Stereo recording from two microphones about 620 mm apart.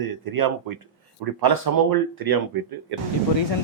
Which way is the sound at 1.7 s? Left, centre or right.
Right.